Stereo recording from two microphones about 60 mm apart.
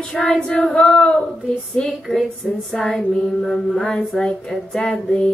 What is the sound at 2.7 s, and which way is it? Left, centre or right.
Female singing, centre.